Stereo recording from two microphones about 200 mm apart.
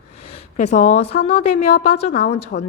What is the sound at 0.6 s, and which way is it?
Speech, 35° left (ahead or behind).